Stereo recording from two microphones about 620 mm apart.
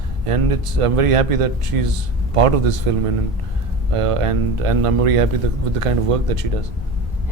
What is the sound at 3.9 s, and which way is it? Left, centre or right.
A man's voice, right.